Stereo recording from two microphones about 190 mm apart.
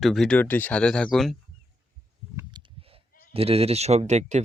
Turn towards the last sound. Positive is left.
turn(degrees=-35)  # may be behind; listen again after turning